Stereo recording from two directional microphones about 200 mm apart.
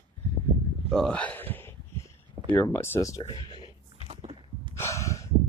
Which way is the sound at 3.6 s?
30° right (ahead or behind).